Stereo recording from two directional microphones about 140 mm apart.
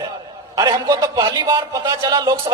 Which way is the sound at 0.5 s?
25° right (ahead or behind).